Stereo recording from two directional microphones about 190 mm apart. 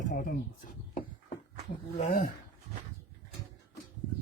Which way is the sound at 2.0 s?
45° left (ahead or behind).